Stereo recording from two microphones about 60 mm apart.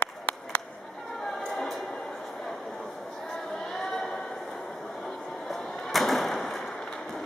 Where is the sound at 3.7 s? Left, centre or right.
Centre.